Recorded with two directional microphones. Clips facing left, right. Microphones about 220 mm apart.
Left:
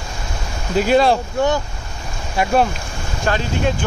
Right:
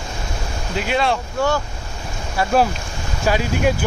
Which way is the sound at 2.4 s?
20° left (ahead or behind).